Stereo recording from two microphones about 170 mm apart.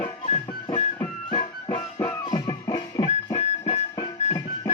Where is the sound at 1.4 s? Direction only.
30° left (ahead or behind).